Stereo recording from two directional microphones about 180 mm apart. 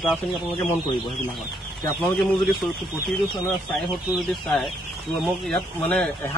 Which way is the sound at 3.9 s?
Centre (ahead or behind).